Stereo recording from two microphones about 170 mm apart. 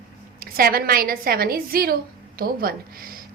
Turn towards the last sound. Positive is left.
turn(degrees=-60)  # may be behind; listen again after turning